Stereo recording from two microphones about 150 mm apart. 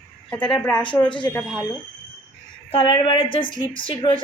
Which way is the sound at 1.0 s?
30° left (ahead or behind).